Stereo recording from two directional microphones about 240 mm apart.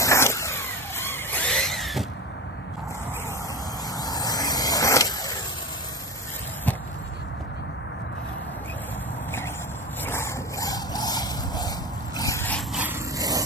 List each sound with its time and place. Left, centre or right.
0.0 s vehicle: centre
3.9 s vehicle: centre
10.0 s dog: centre
12.7 s a sound: centre